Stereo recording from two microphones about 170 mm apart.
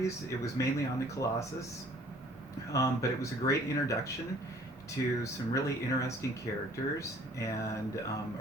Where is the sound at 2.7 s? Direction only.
20° left (ahead or behind).